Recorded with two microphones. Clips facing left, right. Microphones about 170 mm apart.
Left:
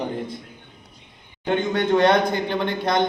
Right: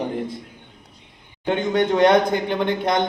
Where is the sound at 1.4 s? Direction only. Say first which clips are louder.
Right 1 dB; 15° right (ahead or behind).